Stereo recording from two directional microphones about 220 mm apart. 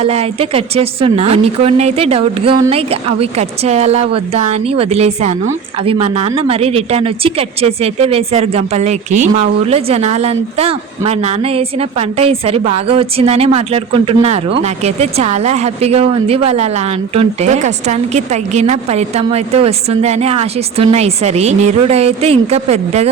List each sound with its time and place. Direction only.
0.0 s a woman's voice: 30° right (ahead or behind)